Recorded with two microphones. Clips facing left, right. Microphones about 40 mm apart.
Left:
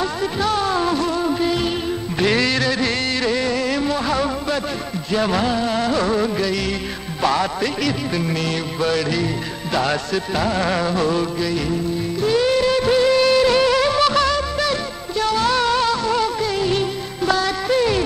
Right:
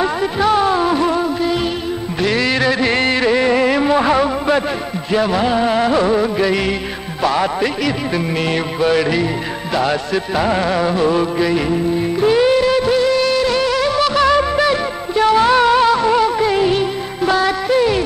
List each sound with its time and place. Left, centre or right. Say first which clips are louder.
0.0 s music: right 5 dB; centre
2.5 s music: right 5 dB; centre
12.5 s music: right 2 dB; centre
14.2 s music of bollywood: right 6 dB; right
16.7 s music: right 4 dB; centre